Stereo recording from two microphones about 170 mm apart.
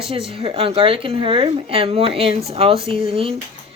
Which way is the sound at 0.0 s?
35° right (ahead or behind).